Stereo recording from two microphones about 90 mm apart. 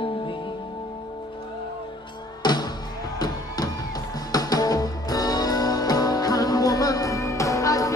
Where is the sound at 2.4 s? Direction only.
50° left (ahead or behind).